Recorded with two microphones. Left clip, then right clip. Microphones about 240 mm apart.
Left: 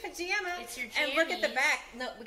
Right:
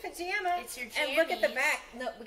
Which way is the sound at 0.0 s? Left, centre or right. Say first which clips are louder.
Even; centre.